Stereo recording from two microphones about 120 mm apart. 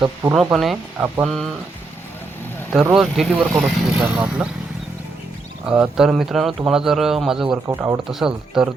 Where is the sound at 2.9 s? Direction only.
5° right (ahead or behind).